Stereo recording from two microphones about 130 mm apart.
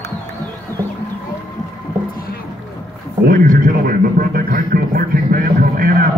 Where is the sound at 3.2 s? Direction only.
90° right.